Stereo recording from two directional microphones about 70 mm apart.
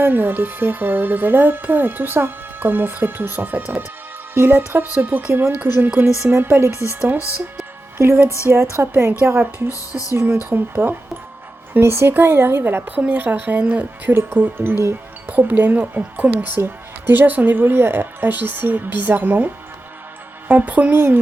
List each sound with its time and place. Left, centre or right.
0.0 s speech: right
7.9 s speech: right
12.8 s speech: centre
14.1 s speech: right
14.3 s speech: right
20.5 s speech: right